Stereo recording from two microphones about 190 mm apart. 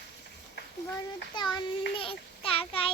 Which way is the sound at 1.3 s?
25° left (ahead or behind).